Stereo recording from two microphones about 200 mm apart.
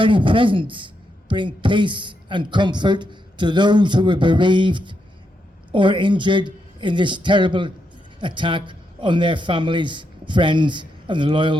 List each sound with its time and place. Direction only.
0.0 s a man's voice: 25° right (ahead or behind)